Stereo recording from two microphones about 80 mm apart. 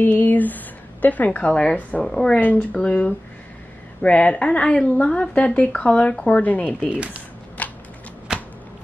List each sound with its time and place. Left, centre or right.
0.0 s a woman's voice: left
6.9 s speech: centre
7.6 s a sound: centre
8.3 s shuffling cards: centre